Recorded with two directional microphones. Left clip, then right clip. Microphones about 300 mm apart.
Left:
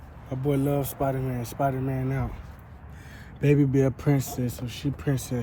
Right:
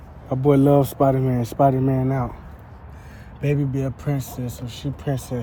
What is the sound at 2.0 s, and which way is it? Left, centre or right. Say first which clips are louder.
Speech: right 8 dB; centre.